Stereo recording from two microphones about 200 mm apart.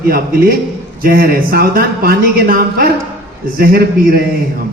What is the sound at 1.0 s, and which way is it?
A man's voice, 45° right (ahead or behind).